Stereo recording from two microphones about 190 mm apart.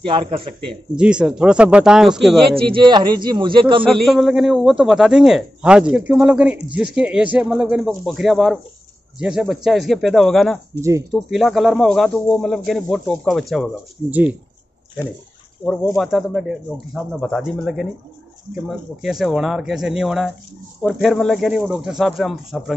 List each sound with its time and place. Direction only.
0.7 s a man's voice: 5° right (ahead or behind)
2.5 s speech: 25° right (ahead or behind)
3.9 s a man's voice: centre (ahead or behind)
10.8 s speech: 15° right (ahead or behind)
11.1 s a man's voice: centre (ahead or behind)
15.6 s a man's voice: centre (ahead or behind)